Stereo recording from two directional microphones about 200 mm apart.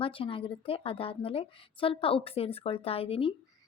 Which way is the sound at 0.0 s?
25° left (ahead or behind).